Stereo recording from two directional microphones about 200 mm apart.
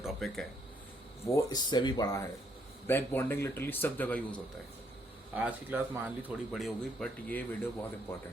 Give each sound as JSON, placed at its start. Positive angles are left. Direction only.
{"t": 0.0, "sound": "a sound", "side_deg": 0}
{"t": 1.3, "sound": "a man's voice", "side_deg": 15}
{"t": 5.3, "sound": "speech", "side_deg": -10}